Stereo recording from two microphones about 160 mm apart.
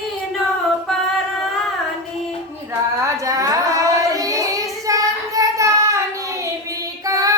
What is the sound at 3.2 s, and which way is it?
Child singing, 20° right (ahead or behind).